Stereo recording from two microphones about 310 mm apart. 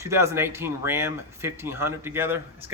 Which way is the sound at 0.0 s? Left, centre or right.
Centre.